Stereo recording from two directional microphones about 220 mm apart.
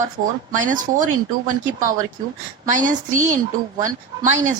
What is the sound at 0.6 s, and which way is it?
Speech, 35° right (ahead or behind).